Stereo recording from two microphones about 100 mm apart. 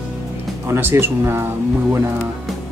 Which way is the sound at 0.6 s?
25° right (ahead or behind).